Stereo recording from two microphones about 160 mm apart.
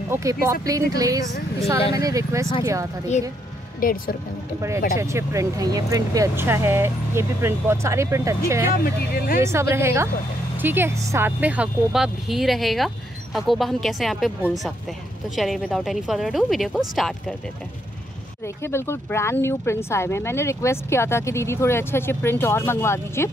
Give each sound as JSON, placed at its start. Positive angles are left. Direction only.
{"t": 0.1, "sound": "speech", "side_deg": -20}
{"t": 3.8, "sound": "speech", "side_deg": 65}
{"t": 4.6, "sound": "speech", "side_deg": -20}
{"t": 8.8, "sound": "speech", "side_deg": 70}
{"t": 9.4, "sound": "speech", "side_deg": -15}
{"t": 18.6, "sound": "speech", "side_deg": 15}